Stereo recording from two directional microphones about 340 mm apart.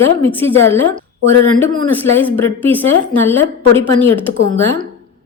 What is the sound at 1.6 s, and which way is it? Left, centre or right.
A woman's voice, centre.